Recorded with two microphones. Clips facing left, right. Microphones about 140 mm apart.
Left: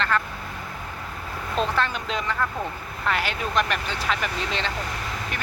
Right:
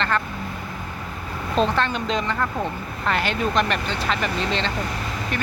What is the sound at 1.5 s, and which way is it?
Speech, 25° right (ahead or behind).